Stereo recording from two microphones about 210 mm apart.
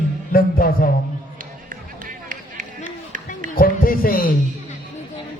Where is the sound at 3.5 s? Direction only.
45° left (ahead or behind).